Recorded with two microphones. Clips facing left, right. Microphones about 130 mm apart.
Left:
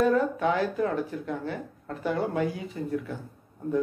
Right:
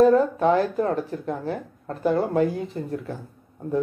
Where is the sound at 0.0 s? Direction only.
35° right (ahead or behind).